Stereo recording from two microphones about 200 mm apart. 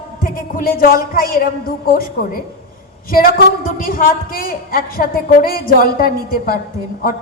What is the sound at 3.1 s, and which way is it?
A woman's voice, 45° left (ahead or behind).